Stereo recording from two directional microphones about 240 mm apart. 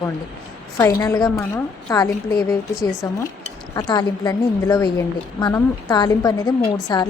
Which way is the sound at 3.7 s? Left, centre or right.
Centre.